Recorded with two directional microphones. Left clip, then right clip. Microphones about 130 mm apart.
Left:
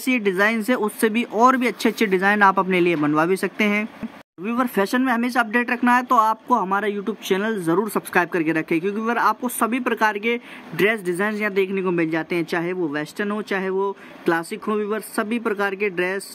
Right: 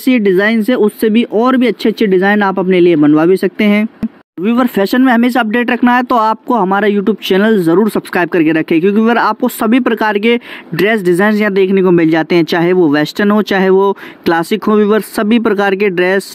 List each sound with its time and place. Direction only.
0.0 s speech: 25° right (ahead or behind)
4.5 s speech: 35° right (ahead or behind); by 16.2 s 60° right (ahead or behind)